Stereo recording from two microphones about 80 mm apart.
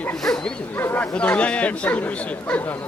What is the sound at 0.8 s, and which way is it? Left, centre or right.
Speech, left.